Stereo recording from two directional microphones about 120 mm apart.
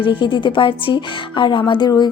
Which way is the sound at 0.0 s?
45° left (ahead or behind).